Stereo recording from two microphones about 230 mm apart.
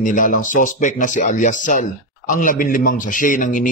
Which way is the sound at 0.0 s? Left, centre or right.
Left.